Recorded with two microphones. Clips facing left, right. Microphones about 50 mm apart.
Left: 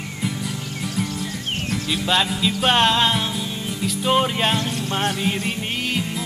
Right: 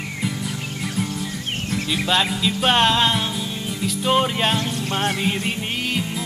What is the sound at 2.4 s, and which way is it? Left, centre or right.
Music, centre.